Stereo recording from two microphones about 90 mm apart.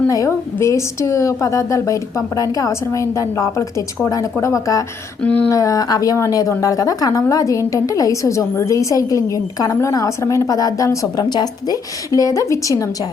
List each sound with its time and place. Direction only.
0.1 s a woman's voice: 35° left (ahead or behind)
5.2 s speech: 15° left (ahead or behind)
5.5 s a woman's voice: 40° left (ahead or behind)